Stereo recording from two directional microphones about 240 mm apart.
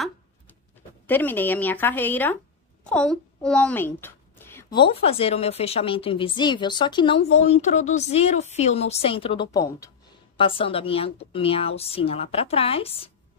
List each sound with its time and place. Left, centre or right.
1.0 s a woman's voice: centre; by 13.1 s left